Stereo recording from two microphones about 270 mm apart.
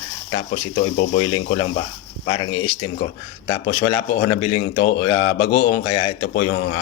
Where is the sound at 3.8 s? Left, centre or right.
Left.